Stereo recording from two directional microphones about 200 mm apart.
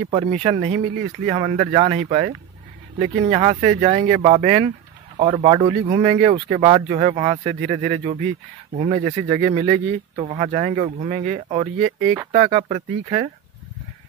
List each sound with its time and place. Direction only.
0.1 s speech: 30° right (ahead or behind)